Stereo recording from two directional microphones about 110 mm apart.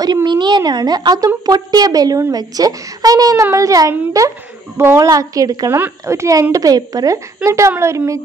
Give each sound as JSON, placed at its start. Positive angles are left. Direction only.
{"t": 0.0, "sound": "a woman's voice", "side_deg": -40}